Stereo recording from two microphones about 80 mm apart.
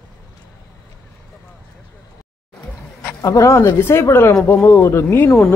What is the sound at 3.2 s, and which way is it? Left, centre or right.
Speech, left.